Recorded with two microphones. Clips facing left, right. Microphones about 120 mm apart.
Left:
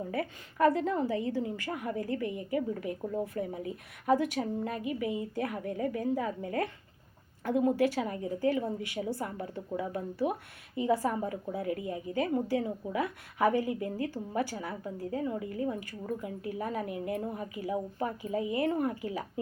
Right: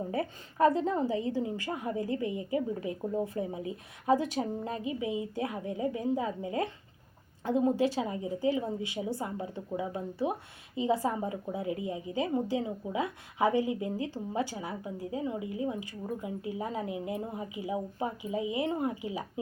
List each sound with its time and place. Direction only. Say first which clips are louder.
0.1 s a woman's voice: right 1 dB; 25° right (ahead or behind)